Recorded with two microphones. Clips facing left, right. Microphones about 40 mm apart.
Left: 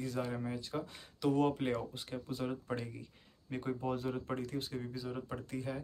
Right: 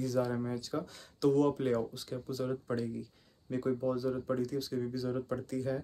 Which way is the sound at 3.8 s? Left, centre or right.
Left.